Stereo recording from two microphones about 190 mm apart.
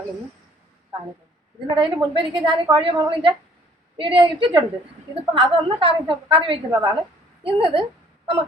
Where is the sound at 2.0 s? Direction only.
25° right (ahead or behind).